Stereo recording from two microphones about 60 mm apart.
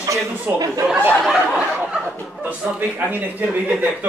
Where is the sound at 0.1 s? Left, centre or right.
Right.